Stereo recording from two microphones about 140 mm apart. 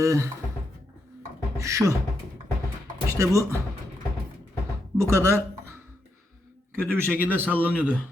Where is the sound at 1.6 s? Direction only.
20° right (ahead or behind).